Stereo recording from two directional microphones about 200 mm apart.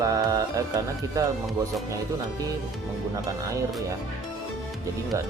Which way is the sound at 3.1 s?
15° right (ahead or behind).